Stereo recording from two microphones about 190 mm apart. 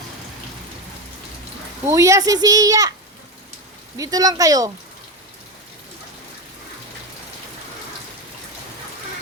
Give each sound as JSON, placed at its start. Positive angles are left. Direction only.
{"t": 1.9, "sound": "a child's voice", "side_deg": -15}
{"t": 3.9, "sound": "a child's voice", "side_deg": -20}